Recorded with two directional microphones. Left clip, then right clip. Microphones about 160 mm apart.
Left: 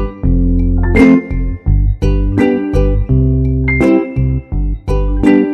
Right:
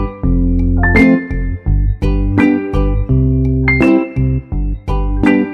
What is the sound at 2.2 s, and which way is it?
Music, 5° left (ahead or behind).